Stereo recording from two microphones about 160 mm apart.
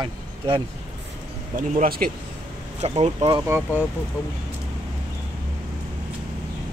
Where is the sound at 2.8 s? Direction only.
40° right (ahead or behind).